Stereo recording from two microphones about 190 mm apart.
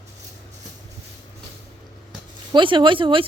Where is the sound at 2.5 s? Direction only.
25° right (ahead or behind).